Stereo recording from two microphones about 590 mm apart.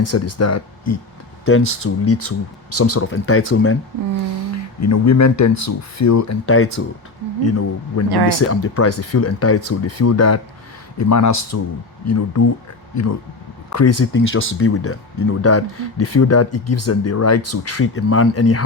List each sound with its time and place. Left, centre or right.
0.0 s speech: left
4.8 s speech: left